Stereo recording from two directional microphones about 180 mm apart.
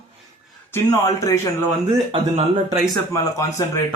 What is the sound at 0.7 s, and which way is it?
Speech, 15° left (ahead or behind).